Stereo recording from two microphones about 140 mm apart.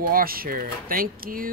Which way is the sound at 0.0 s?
90° right.